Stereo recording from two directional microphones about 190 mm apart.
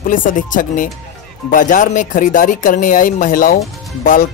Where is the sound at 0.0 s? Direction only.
45° left (ahead or behind).